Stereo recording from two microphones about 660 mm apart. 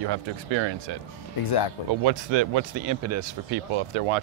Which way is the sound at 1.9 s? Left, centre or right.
Right.